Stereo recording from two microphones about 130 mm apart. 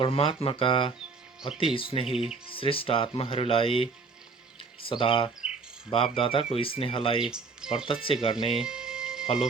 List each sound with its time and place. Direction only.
0.0 s speech: 45° left (ahead or behind)
2.1 s speech: 5° right (ahead or behind)
2.6 s speech: 45° left (ahead or behind)
7.3 s speech: 5° right (ahead or behind)
8.0 s speech: 45° left (ahead or behind)
8.5 s music: 5° right (ahead or behind)